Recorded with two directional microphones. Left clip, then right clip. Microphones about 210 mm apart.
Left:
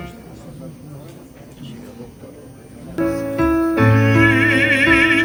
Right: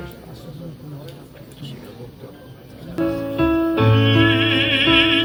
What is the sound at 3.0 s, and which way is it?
Music, 25° left (ahead or behind).